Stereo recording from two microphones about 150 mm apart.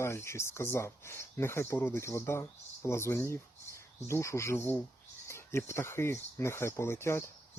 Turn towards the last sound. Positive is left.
turn(degrees=15)  # may be behind; listen again after turning